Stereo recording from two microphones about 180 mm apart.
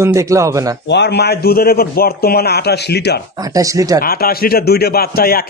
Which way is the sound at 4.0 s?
55° left (ahead or behind).